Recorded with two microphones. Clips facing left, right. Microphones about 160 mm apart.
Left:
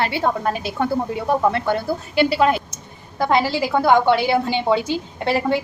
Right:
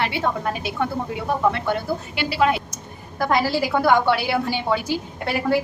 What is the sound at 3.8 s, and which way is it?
Speech, 20° left (ahead or behind).